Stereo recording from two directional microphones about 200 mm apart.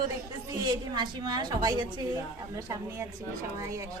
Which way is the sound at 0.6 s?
20° right (ahead or behind).